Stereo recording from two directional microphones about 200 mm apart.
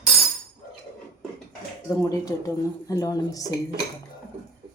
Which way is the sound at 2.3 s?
15° left (ahead or behind).